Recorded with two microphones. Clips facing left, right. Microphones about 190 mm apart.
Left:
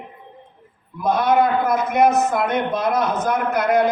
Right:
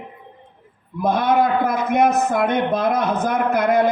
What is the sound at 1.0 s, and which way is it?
A man's voice, 55° right (ahead or behind).